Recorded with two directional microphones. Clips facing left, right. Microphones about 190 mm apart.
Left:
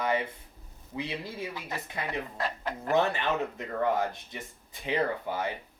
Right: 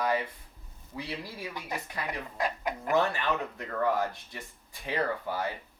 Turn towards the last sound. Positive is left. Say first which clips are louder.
# left 1 dB
turn(degrees=20)  # may be behind; listen again after turning